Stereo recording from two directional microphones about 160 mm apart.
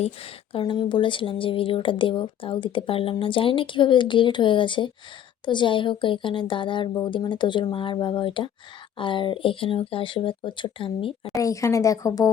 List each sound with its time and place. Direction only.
0.0 s speech: 35° left (ahead or behind)
11.3 s speech: 20° left (ahead or behind)